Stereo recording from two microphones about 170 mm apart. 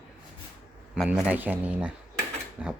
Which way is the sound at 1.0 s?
10° right (ahead or behind).